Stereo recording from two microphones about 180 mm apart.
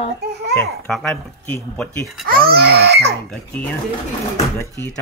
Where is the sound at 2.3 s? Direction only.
60° right (ahead or behind).